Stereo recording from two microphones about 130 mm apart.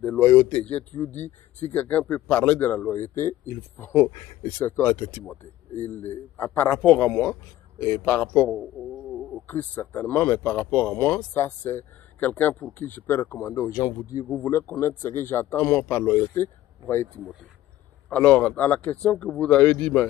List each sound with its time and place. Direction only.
0.0 s speech: 15° left (ahead or behind)
8.9 s a sound: centre (ahead or behind)
9.5 s speech: 15° left (ahead or behind)
18.1 s speech: 10° left (ahead or behind)